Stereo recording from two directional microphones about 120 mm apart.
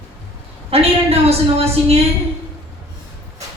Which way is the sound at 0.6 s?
55° right (ahead or behind).